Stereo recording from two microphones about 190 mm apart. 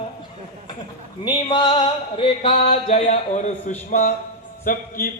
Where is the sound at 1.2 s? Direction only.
25° left (ahead or behind).